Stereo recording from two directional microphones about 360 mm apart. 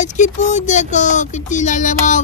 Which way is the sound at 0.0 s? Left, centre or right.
Centre.